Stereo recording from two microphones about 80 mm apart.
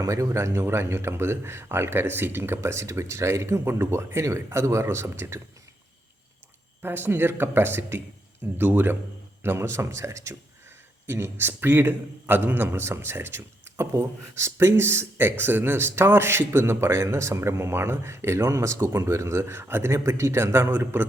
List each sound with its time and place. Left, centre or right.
0.0 s a man's voice: right
6.8 s a man's voice: right